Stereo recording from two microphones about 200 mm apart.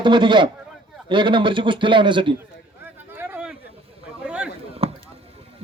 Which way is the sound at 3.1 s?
10° right (ahead or behind).